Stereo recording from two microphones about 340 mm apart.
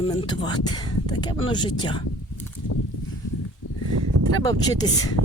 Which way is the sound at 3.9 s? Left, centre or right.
Right.